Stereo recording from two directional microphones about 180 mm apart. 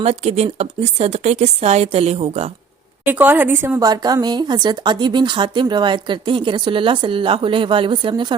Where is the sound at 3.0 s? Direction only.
10° right (ahead or behind).